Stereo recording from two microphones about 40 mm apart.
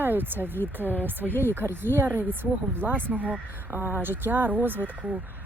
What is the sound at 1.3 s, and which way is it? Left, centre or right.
Speech, left.